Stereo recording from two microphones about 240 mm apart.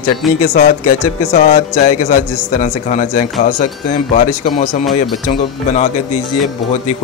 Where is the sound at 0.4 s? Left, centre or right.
Left.